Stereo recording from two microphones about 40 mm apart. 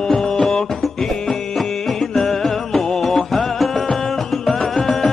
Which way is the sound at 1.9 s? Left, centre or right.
Centre.